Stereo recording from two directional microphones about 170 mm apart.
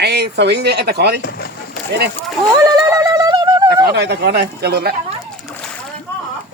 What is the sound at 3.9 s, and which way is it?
Speech, 80° right.